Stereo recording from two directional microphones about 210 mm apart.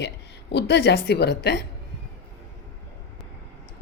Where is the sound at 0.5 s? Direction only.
55° left (ahead or behind).